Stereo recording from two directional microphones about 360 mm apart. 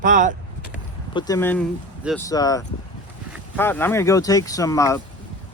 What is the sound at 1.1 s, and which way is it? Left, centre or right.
Speech, centre.